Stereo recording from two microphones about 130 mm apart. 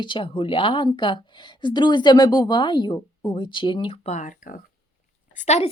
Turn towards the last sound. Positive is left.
turn(degrees=60)  # may be behind; listen again after turning